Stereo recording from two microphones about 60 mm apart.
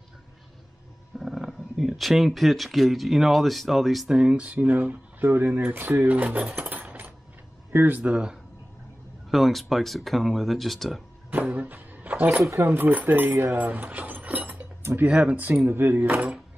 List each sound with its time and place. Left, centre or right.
1.2 s speech: centre
4.1 s speech: centre; by 8.0 s right
8.0 s speech: centre
9.3 s speech: centre
11.5 s speech: right
15.6 s speech: right